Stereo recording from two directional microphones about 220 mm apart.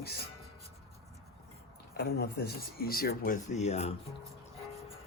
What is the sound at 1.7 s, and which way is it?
Speech, 45° left (ahead or behind).